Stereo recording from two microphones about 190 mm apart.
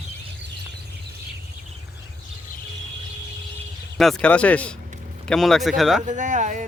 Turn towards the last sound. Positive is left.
turn(degrees=-40)  # may be behind; listen again after turning